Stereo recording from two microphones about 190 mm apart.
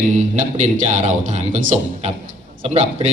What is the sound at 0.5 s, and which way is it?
A man's voice, 40° right (ahead or behind).